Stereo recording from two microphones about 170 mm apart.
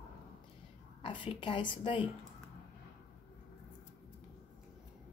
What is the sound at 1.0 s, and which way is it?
A woman's voice, 30° left (ahead or behind).